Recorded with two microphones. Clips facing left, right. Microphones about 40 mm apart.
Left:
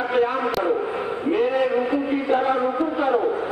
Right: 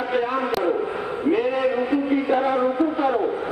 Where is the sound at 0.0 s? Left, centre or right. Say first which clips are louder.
Left 2 dB; centre.